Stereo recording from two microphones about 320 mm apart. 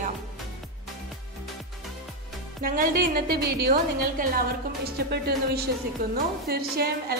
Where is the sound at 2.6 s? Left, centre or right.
Right.